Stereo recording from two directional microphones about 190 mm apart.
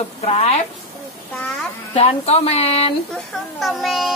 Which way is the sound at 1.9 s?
35° left (ahead or behind).